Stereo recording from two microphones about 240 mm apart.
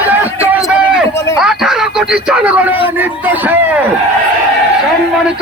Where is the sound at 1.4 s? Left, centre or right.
Centre.